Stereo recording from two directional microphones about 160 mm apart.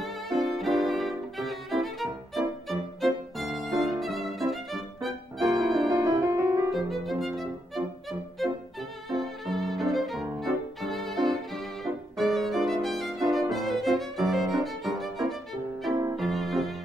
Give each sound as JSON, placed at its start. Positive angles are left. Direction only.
{"t": 0.6, "sound": "violin", "side_deg": 0}
{"t": 5.6, "sound": "music", "side_deg": 0}
{"t": 5.9, "sound": "music", "side_deg": -20}
{"t": 6.7, "sound": "violin", "side_deg": 0}
{"t": 15.9, "sound": "violin", "side_deg": -20}
{"t": 16.2, "sound": "music", "side_deg": 0}